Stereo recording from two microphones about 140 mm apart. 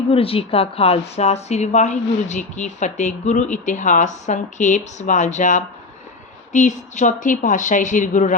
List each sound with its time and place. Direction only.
0.1 s a woman's voice: 45° left (ahead or behind)